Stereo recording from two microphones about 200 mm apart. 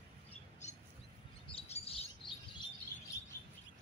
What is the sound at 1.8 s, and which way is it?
Chirp, 30° left (ahead or behind).